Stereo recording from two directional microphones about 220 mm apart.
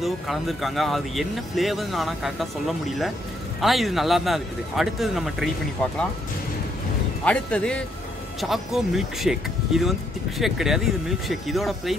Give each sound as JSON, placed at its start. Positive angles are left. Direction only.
{"t": 0.0, "sound": "speech", "side_deg": 0}
{"t": 3.6, "sound": "speech", "side_deg": 0}
{"t": 7.2, "sound": "speech", "side_deg": 5}